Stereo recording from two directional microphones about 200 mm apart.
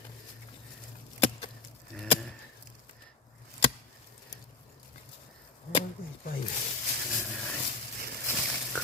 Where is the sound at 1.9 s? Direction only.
Centre (ahead or behind).